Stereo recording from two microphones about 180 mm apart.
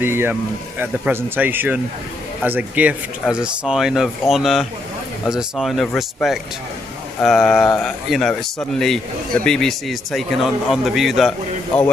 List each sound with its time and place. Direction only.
0.0 s speech: 10° right (ahead or behind)